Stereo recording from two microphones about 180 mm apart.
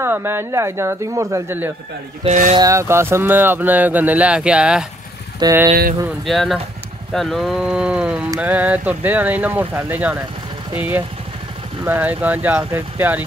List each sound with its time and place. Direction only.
0.0 s speech: 15° right (ahead or behind)
2.2 s speech: 45° right (ahead or behind)
2.5 s speech: 20° right (ahead or behind)
6.2 s speech: centre (ahead or behind)